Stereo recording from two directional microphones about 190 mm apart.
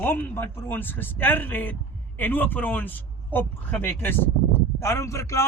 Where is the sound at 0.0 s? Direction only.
10° left (ahead or behind).